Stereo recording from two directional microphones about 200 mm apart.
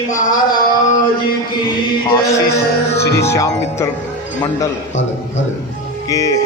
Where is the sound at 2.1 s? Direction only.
15° left (ahead or behind).